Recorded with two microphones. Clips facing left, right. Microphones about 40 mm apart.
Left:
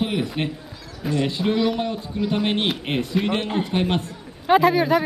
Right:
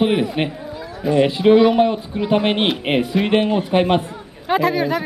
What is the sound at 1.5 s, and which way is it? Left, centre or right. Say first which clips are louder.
A man's voice: right 11 dB; right.